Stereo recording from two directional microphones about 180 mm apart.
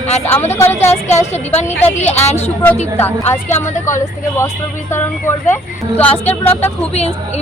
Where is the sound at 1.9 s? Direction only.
40° left (ahead or behind).